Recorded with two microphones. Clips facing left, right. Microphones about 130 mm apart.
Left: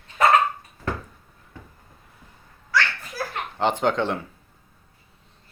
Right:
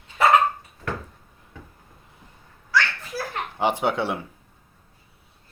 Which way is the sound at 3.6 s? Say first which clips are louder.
Left 1 dB; 10° right (ahead or behind).